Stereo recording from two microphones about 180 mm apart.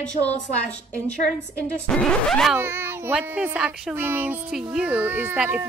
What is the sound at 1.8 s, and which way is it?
Speech, 5° left (ahead or behind).